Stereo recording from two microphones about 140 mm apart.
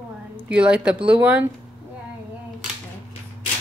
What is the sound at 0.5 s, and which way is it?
Speech, 10° right (ahead or behind).